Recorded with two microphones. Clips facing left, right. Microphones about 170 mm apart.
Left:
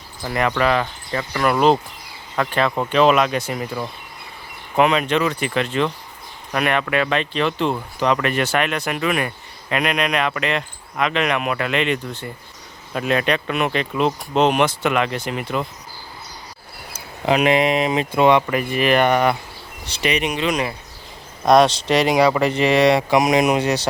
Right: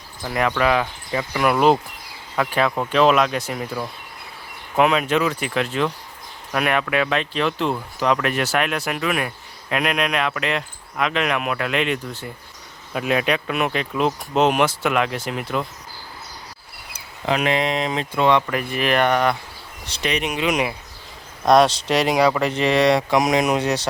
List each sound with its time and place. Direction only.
0.3 s speech: centre (ahead or behind)
17.2 s speech: 15° left (ahead or behind); by 20.5 s 5° right (ahead or behind)
20.5 s speech: 15° right (ahead or behind)
21.4 s speech: centre (ahead or behind)